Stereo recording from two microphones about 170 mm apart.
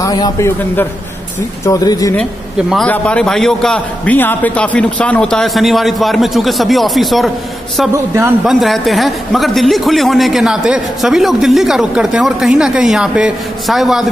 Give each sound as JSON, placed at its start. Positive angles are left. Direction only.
{"t": 0.0, "sound": "a man's voice", "side_deg": 20}
{"t": 1.7, "sound": "speech", "side_deg": 20}
{"t": 2.7, "sound": "a man's voice", "side_deg": 5}
{"t": 8.5, "sound": "a man's voice", "side_deg": 0}